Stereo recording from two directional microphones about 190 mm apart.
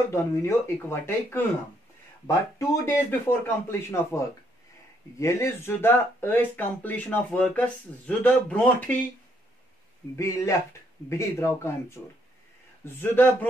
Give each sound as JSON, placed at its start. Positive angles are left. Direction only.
{"t": 0.1, "sound": "speech", "side_deg": 15}
{"t": 5.2, "sound": "speech", "side_deg": 15}
{"t": 10.1, "sound": "speech", "side_deg": 15}